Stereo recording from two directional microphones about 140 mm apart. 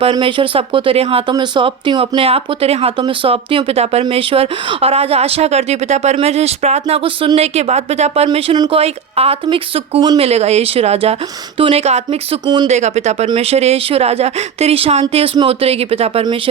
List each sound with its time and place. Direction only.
0.0 s speech: 35° right (ahead or behind)